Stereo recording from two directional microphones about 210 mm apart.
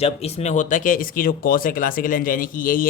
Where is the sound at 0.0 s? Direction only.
30° left (ahead or behind).